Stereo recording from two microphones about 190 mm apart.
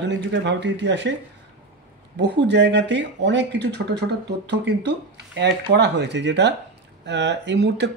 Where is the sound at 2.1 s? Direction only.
65° right (ahead or behind).